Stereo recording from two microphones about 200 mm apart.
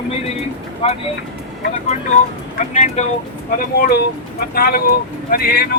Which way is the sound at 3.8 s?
50° left (ahead or behind).